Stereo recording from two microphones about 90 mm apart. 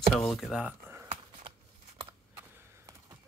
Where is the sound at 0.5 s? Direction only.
15° right (ahead or behind).